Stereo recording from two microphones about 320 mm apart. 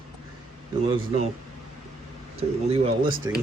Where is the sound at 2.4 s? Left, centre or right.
Centre.